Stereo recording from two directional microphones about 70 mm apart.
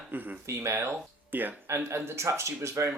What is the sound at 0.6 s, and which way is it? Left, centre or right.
Speech, right.